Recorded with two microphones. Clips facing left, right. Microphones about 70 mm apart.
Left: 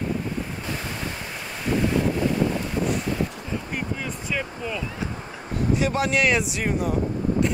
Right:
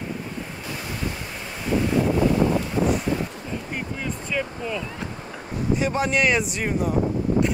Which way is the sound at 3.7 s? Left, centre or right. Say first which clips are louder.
Even; centre.